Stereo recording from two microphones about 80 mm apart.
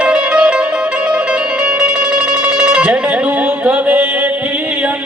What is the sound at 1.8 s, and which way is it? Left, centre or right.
Music, centre.